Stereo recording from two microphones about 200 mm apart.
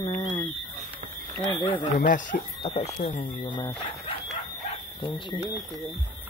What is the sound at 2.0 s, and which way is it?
Speech, 40° left (ahead or behind).